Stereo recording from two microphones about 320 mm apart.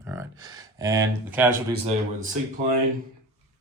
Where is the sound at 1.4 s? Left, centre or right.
Right.